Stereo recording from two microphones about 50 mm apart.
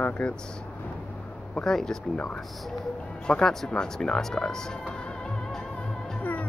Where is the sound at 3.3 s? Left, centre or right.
Centre.